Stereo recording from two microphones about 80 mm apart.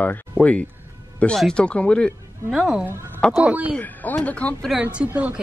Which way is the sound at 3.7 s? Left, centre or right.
Left.